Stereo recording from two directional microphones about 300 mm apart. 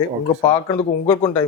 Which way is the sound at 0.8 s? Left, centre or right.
Centre.